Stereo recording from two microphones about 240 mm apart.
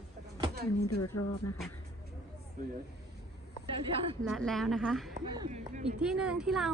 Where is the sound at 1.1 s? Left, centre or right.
Left.